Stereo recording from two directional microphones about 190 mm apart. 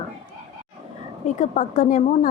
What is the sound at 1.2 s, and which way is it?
A woman's voice, 40° left (ahead or behind).